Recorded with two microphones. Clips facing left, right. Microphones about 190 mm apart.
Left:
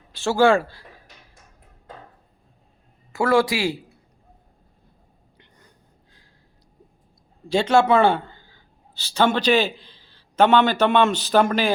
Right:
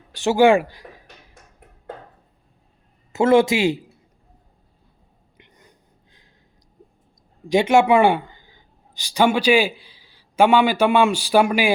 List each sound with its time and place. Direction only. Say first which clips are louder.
0.1 s speech: right 3 dB; 15° right (ahead or behind)
3.1 s speech: right 4 dB; 20° right (ahead or behind)
5.4 s a sound: right 3 dB; 15° right (ahead or behind)
7.4 s speech: right 2 dB; 15° right (ahead or behind)